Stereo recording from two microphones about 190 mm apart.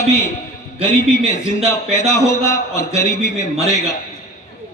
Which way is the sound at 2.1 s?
15° left (ahead or behind).